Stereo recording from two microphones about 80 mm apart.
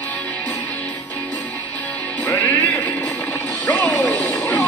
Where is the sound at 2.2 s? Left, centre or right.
Centre.